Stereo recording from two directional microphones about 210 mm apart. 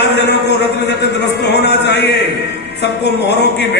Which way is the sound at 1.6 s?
55° left (ahead or behind).